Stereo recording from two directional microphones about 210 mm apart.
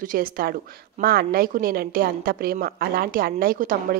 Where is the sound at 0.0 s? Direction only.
40° right (ahead or behind).